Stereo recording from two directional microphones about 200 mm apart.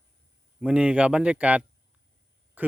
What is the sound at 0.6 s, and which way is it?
Speech, 5° right (ahead or behind).